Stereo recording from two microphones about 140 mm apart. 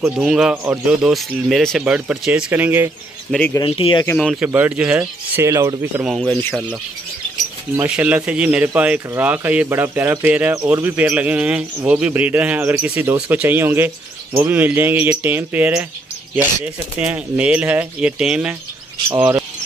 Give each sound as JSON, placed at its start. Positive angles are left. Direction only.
{"t": 0.2, "sound": "speech", "side_deg": -5}
{"t": 3.3, "sound": "speech", "side_deg": 5}
{"t": 3.6, "sound": "speech", "side_deg": 40}
{"t": 4.2, "sound": "speech", "side_deg": 0}
{"t": 6.0, "sound": "speech", "side_deg": 0}
{"t": 7.7, "sound": "speech", "side_deg": -10}